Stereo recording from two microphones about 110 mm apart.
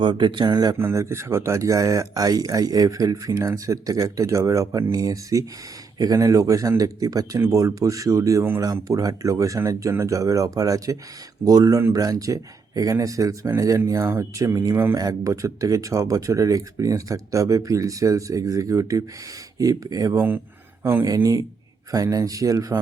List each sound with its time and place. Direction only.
0.0 s speech: 50° right (ahead or behind)
0.8 s speech: 25° right (ahead or behind)
20.1 s speech: 20° right (ahead or behind)